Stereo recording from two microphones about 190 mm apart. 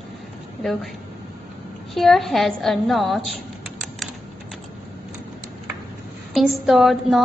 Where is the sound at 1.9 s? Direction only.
Centre (ahead or behind).